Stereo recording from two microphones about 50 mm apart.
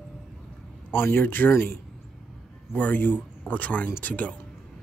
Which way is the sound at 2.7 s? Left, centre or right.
Left.